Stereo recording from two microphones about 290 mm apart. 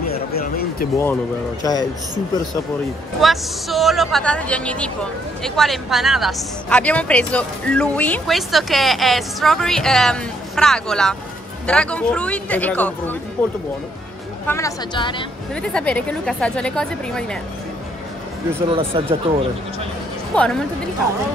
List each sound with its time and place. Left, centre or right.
0.3 s a sound: left
1.6 s a woman's voice: centre
3.2 s speech: centre
14.4 s a woman's voice: centre
15.5 s speech: centre
18.7 s speech: centre
20.3 s speech: centre